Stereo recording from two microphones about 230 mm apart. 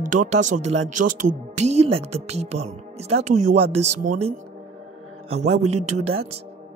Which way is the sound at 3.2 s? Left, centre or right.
Right.